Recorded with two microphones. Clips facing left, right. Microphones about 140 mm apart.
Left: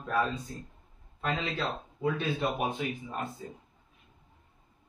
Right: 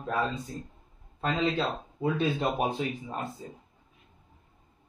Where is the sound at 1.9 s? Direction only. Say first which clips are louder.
Right 3 dB; 25° right (ahead or behind).